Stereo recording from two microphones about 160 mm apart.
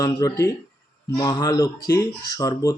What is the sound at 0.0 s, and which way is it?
Speech, 20° left (ahead or behind).